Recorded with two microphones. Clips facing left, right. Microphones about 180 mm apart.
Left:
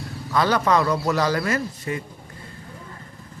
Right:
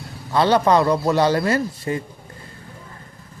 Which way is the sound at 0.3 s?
30° right (ahead or behind).